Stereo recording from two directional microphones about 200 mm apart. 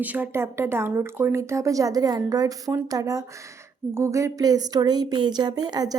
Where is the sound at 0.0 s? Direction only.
10° right (ahead or behind).